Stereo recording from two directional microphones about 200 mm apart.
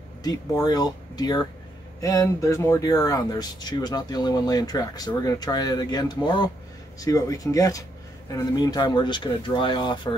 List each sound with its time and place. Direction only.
0.2 s speech: 20° left (ahead or behind)